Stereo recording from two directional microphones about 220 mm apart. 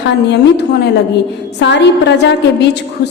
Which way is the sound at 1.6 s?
50° left (ahead or behind).